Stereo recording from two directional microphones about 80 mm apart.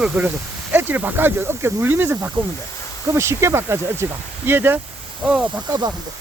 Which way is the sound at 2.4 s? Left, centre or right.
Right.